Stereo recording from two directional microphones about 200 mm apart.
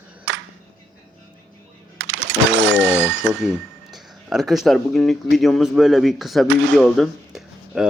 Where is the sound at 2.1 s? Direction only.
70° right (ahead or behind).